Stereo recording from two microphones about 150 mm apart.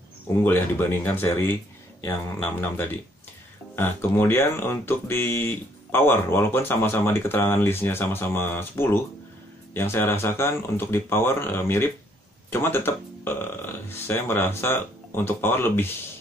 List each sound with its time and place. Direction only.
0.4 s speech: 15° left (ahead or behind)